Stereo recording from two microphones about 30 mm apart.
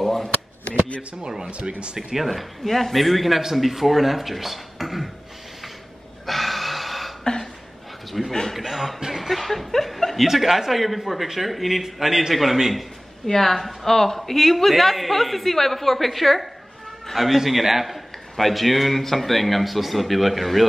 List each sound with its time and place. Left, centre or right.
0.0 s a sound: centre
1.5 s speech: right
2.1 s a man's voice: centre
6.2 s gasp: centre
8.3 s speech: centre
8.5 s a man's voice: centre
10.2 s a man's voice: centre
13.3 s a man's voice: centre